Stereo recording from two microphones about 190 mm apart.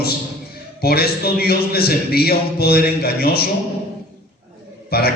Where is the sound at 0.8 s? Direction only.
55° left (ahead or behind).